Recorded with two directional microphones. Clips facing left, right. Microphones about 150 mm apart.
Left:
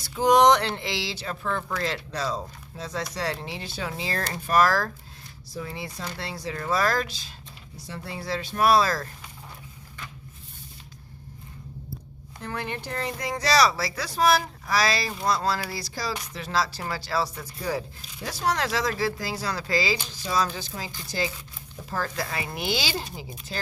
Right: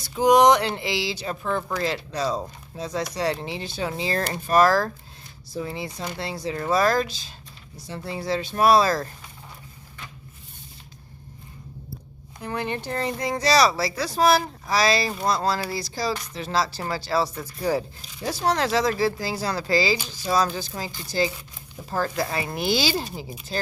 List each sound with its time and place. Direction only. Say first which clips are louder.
0.1 s speech: right 2 dB; 15° right (ahead or behind)
12.4 s speech: right 4 dB; 20° right (ahead or behind); by 23.7 s 35° right (ahead or behind)